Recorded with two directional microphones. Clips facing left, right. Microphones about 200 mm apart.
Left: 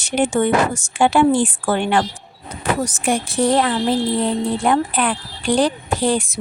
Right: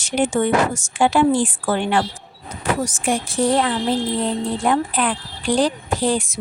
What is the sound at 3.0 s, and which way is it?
A woman's voice, 65° left (ahead or behind).